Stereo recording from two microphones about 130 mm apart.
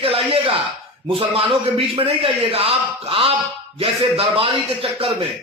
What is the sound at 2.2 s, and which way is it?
Speech, 45° right (ahead or behind).